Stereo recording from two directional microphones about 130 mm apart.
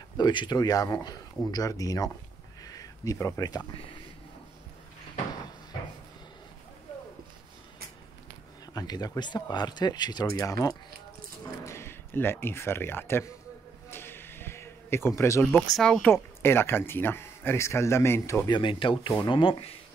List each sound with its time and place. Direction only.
0.2 s speech: 35° left (ahead or behind)
2.6 s a sound: 30° left (ahead or behind)
8.7 s speech: 30° left (ahead or behind)
13.8 s a sound: 15° left (ahead or behind)
15.7 s speech: 5° left (ahead or behind)
16.1 s speech: 15° left (ahead or behind)
18.5 s speech: 40° left (ahead or behind)